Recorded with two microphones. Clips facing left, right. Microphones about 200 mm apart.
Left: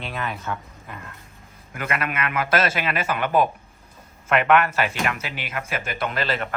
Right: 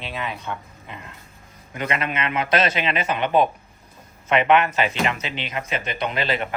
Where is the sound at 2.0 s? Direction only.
25° right (ahead or behind).